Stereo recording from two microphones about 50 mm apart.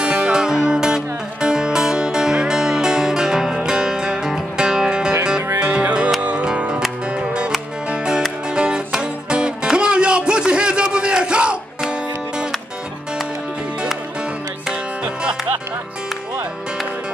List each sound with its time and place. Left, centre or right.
0.0 s music: centre
7.2 s music: centre